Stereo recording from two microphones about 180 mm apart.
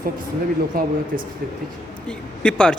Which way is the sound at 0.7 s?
55° right (ahead or behind).